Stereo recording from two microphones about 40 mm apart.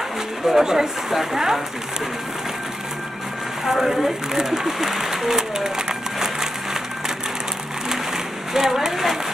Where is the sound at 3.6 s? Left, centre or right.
Centre.